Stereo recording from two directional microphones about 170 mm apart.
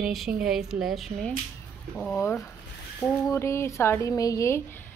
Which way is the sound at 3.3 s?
15° left (ahead or behind).